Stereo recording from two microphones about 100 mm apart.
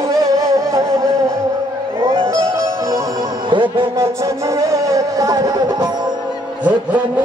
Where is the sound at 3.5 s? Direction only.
55° right (ahead or behind).